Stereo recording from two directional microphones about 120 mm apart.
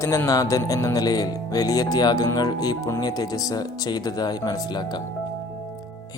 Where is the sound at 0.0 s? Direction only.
25° left (ahead or behind).